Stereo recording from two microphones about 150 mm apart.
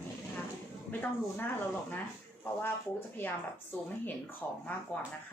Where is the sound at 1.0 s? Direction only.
15° left (ahead or behind).